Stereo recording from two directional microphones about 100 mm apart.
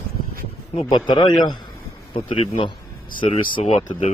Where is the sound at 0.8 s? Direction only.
50° left (ahead or behind).